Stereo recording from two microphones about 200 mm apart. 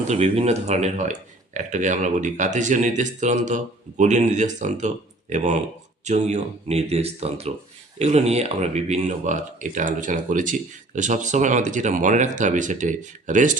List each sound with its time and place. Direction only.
0.1 s speech: 30° right (ahead or behind)